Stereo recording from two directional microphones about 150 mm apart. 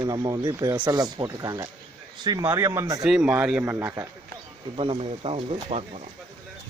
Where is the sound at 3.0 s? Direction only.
5° right (ahead or behind).